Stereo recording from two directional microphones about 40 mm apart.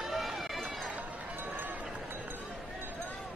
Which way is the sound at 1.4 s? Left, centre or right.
Right.